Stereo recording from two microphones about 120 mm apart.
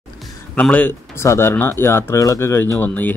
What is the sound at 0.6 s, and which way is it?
Speech, 10° left (ahead or behind).